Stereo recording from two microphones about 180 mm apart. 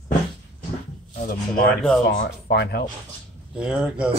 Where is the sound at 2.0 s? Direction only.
65° left (ahead or behind).